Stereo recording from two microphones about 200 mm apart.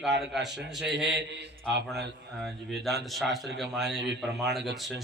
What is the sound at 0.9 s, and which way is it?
Speech, 60° right (ahead or behind).